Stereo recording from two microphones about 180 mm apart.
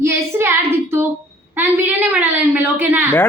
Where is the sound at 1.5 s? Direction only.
10° right (ahead or behind).